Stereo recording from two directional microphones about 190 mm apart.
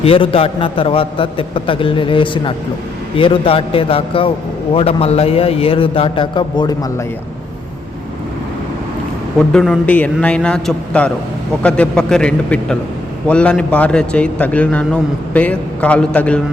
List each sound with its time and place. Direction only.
0.0 s a man's voice: 30° left (ahead or behind)
9.5 s a man's voice: 5° left (ahead or behind)